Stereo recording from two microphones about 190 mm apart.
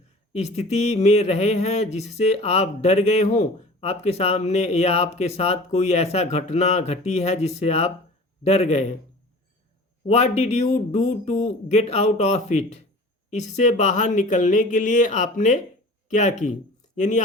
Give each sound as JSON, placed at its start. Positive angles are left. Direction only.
{"t": 0.3, "sound": "speech", "side_deg": 35}
{"t": 10.1, "sound": "speech", "side_deg": 35}